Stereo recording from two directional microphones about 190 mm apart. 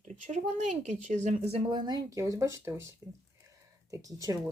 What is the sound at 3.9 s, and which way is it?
Speech, 15° right (ahead or behind).